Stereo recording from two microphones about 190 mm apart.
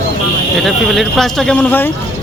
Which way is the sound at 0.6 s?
Centre (ahead or behind).